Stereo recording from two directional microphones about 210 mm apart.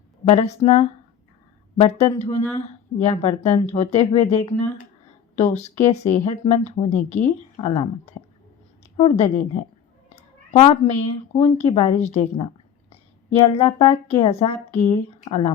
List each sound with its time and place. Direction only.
0.3 s a woman's voice: 30° left (ahead or behind)
9.0 s a woman's voice: 30° left (ahead or behind)
10.5 s a woman's voice: 30° left (ahead or behind)